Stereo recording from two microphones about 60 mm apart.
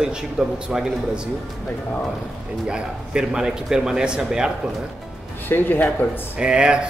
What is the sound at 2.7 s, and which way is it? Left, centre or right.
A man's voice, centre.